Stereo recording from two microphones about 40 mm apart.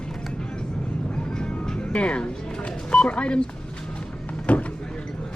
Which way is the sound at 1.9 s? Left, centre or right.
Left.